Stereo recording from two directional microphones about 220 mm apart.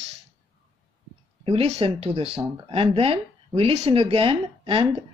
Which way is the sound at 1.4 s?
25° right (ahead or behind).